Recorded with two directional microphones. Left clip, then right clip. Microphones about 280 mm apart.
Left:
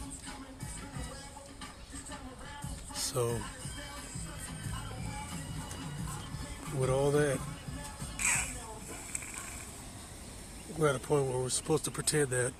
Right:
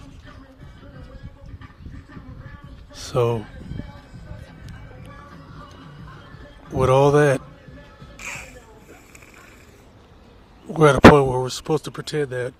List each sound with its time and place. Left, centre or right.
2.9 s a sound: right
6.7 s a man's voice: right
8.1 s music: centre
10.8 s speech: right; by 12.5 s centre